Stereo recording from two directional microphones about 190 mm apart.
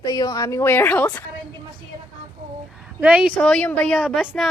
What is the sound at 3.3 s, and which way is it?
A woman's voice, 5° left (ahead or behind).